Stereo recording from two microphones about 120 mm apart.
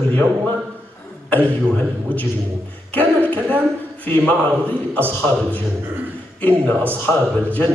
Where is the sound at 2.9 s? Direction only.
15° left (ahead or behind).